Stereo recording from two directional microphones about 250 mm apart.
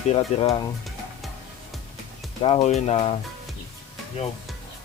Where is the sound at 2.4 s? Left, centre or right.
Left.